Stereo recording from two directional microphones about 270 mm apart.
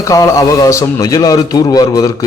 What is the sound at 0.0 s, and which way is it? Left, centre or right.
A man's voice, centre.